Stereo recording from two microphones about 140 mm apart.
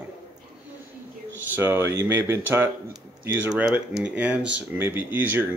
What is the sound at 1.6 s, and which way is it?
Speech, 20° right (ahead or behind).